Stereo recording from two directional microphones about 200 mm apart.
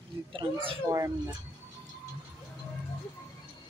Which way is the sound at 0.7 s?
15° right (ahead or behind).